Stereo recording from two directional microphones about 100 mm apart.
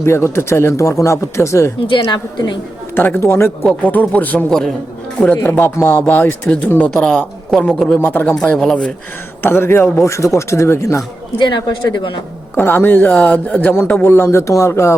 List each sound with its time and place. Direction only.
0.0 s speech: 25° left (ahead or behind)
2.0 s speech: 50° left (ahead or behind)
2.9 s speech: 20° left (ahead or behind)
5.2 s speech: 20° left (ahead or behind)
7.9 s speech: 20° left (ahead or behind)
8.4 s speech: 5° left (ahead or behind)
9.4 s speech: 25° left (ahead or behind)
11.3 s speech: 50° left (ahead or behind)
12.5 s speech: 20° left (ahead or behind)